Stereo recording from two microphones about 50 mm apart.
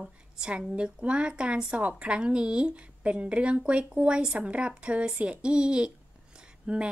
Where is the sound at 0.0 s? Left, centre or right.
Centre.